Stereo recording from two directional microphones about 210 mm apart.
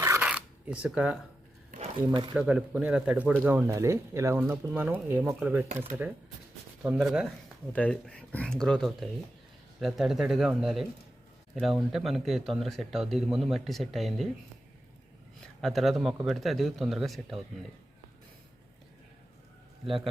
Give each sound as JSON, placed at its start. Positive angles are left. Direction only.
{"t": 0.0, "sound": "a sound", "side_deg": -10}
{"t": 1.7, "sound": "speech", "side_deg": -25}
{"t": 2.3, "sound": "speech", "side_deg": -5}
{"t": 15.6, "sound": "speech", "side_deg": 0}